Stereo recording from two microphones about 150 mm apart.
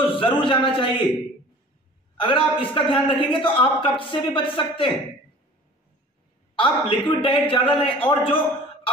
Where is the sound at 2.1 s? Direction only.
35° left (ahead or behind).